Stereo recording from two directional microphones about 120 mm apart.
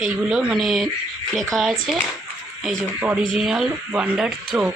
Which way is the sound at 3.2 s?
5° right (ahead or behind).